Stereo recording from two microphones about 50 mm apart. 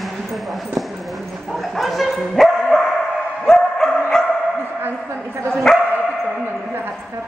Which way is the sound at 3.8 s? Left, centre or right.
Centre.